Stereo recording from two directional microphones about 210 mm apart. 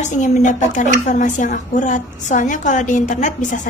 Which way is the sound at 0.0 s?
35° left (ahead or behind).